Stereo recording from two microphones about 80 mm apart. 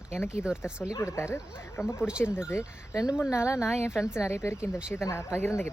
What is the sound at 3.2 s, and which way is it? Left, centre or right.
Speech, left.